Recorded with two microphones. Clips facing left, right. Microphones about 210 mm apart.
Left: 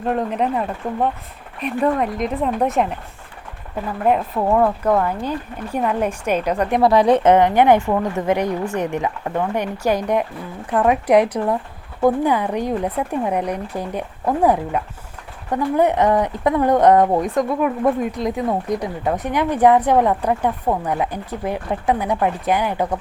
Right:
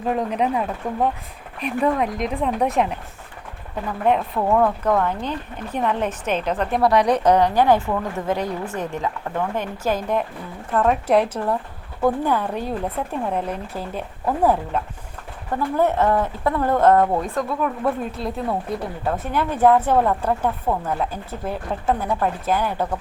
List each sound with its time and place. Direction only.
0.0 s speech: centre (ahead or behind)
4.4 s speech: 10° left (ahead or behind)